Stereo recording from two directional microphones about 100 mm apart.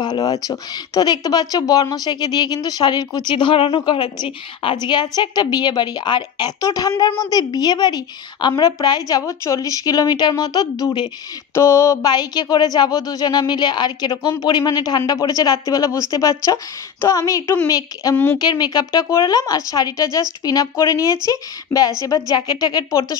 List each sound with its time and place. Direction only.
0.0 s a woman's voice: 45° left (ahead or behind)
4.8 s a woman's voice: 45° left (ahead or behind)
9.2 s speech: 30° left (ahead or behind)
11.5 s speech: 30° left (ahead or behind)
12.1 s a woman's voice: 40° left (ahead or behind)
18.1 s speech: 20° left (ahead or behind)
18.4 s speech: 45° left (ahead or behind)